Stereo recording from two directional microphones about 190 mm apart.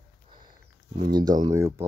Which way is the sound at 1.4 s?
20° right (ahead or behind).